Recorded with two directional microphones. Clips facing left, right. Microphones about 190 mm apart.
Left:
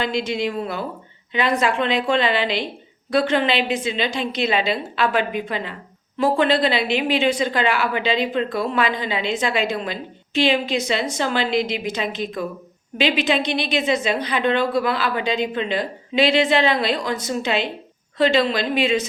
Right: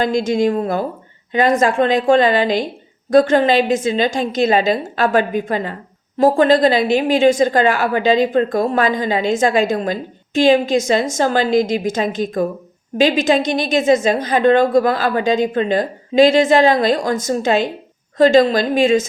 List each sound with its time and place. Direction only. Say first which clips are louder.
0.0 s a woman's voice: right 7 dB; 45° right (ahead or behind)